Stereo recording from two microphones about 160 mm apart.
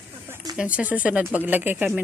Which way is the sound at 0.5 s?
10° right (ahead or behind).